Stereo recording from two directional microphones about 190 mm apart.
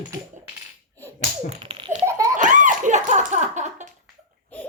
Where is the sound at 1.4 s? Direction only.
25° right (ahead or behind).